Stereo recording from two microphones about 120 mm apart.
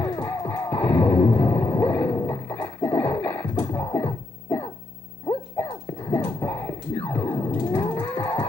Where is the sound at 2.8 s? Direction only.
15° left (ahead or behind).